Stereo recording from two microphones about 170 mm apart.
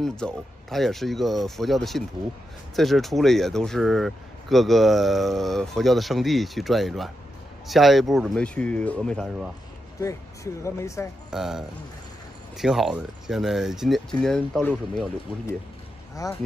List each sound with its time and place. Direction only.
0.0 s speech: 5° left (ahead or behind)
9.9 s speech: 20° left (ahead or behind)
11.2 s speech: 5° right (ahead or behind)